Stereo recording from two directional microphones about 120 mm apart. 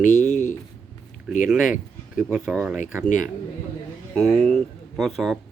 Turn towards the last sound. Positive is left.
turn(degrees=0)  # may be behind; listen again after turning